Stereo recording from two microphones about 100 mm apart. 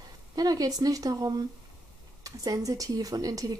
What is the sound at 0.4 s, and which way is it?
Speech, 40° right (ahead or behind).